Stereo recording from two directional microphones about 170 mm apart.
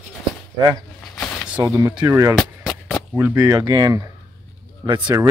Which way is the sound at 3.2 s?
15° right (ahead or behind).